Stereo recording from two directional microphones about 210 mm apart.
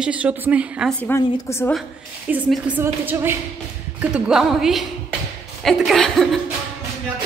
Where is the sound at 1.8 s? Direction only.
5° right (ahead or behind).